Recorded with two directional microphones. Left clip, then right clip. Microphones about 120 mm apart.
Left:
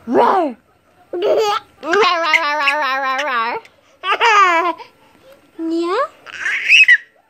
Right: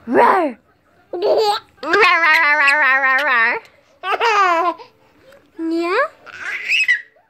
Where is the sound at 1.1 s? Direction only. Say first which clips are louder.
Even; 25° left (ahead or behind).